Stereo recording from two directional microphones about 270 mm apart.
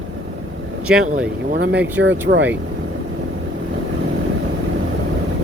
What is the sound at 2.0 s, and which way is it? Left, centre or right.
Speech, right.